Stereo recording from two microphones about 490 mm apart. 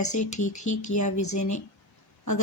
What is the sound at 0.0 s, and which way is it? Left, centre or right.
Speech, left.